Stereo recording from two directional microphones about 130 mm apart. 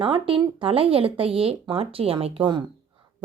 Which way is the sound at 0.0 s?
40° right (ahead or behind).